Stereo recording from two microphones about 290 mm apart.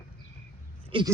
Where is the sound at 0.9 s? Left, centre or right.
Centre.